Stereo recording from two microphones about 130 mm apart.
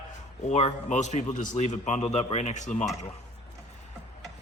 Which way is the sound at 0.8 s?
65° left (ahead or behind).